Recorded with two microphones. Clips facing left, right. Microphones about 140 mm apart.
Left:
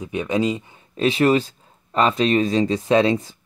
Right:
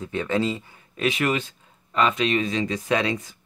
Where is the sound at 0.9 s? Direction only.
30° left (ahead or behind).